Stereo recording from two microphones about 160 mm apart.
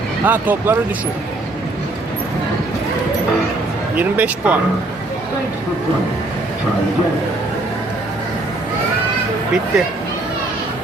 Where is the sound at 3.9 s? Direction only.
10° right (ahead or behind).